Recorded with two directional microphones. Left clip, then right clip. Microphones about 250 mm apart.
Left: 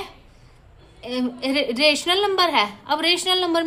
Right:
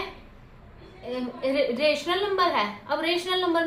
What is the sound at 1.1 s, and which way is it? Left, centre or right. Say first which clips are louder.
A woman's voice: left 3 dB; left.